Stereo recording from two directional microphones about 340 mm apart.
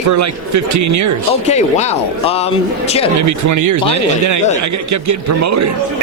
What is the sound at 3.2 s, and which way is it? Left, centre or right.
A man's voice, right.